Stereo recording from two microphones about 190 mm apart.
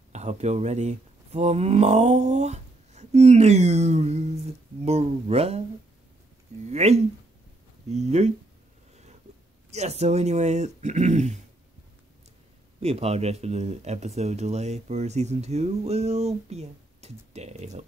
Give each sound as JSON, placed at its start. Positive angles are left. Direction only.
{"t": 0.1, "sound": "speech", "side_deg": -35}
{"t": 6.6, "sound": "speech", "side_deg": -35}
{"t": 9.7, "sound": "speech", "side_deg": -35}
{"t": 12.8, "sound": "speech", "side_deg": -30}